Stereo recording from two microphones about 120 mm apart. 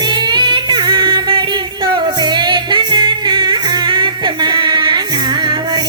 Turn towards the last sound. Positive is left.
turn(degrees=-40)  # may be behind; listen again after turning